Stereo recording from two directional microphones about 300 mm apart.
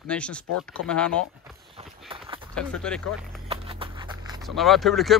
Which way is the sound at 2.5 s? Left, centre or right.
Centre.